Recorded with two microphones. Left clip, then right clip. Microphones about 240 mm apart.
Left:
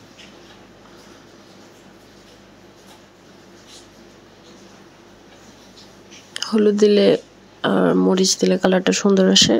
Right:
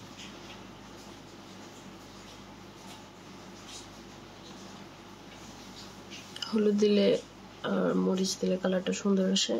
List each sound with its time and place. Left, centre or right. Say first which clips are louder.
6.3 s speech: left 11 dB; left